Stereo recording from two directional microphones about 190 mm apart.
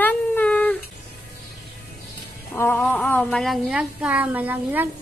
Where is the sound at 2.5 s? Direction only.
15° left (ahead or behind); by 4.9 s 10° right (ahead or behind).